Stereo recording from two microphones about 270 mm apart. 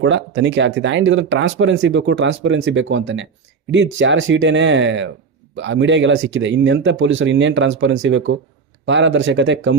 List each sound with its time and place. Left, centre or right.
0.0 s speech: right